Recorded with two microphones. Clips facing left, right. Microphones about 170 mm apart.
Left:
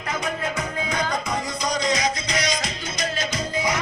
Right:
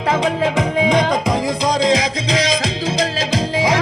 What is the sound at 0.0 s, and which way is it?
Music, 90° right.